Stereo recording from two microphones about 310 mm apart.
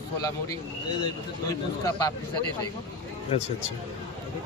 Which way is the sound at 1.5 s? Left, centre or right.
Centre.